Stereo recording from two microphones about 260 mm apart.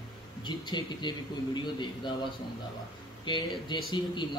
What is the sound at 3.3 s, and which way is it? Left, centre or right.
Speech, centre.